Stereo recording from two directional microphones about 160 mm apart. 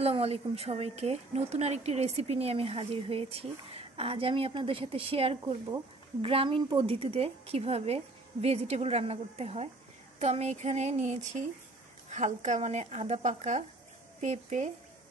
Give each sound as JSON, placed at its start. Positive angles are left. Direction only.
{"t": 0.0, "sound": "speech", "side_deg": -40}